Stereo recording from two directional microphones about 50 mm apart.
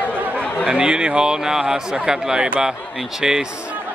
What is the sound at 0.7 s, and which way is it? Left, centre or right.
Speech, centre.